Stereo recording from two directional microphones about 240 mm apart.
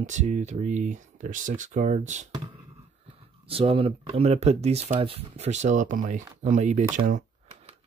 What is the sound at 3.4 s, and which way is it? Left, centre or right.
Speech, right.